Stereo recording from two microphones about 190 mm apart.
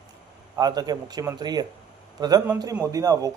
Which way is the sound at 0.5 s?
20° right (ahead or behind).